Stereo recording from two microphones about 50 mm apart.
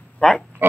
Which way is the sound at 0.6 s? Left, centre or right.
Right.